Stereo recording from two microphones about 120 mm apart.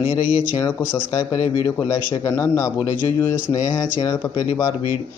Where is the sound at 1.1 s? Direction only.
35° left (ahead or behind).